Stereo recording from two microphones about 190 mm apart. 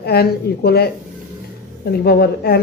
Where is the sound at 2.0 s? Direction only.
55° left (ahead or behind).